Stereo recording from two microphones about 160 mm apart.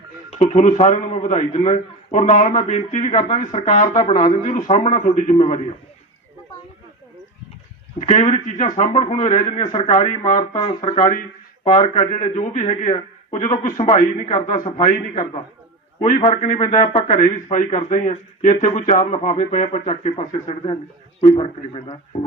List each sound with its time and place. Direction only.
0.3 s a man's voice: 40° left (ahead or behind)
2.2 s speech: 50° left (ahead or behind)
8.0 s speech: 50° left (ahead or behind)
9.0 s a man's voice: 35° left (ahead or behind)
9.8 s speech: 55° left (ahead or behind)
10.5 s a man's voice: 30° left (ahead or behind)